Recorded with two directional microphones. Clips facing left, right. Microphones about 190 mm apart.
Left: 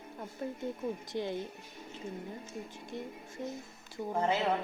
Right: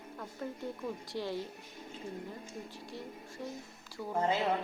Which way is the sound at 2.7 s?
20° left (ahead or behind).